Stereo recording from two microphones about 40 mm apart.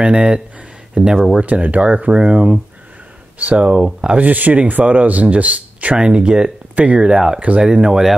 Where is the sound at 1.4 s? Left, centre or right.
Right.